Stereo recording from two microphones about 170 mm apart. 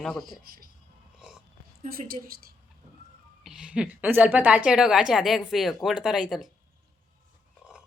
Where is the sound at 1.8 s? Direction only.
55° right (ahead or behind).